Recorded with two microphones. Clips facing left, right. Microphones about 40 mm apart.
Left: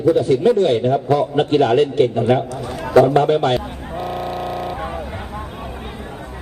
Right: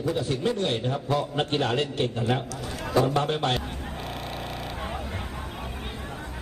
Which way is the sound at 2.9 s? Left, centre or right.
Left.